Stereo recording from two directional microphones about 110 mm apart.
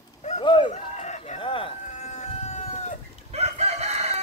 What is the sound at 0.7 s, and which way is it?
Chicken, 90° left.